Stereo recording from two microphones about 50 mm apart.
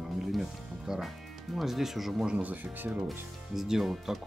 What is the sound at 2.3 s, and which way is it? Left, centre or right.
Speech, right.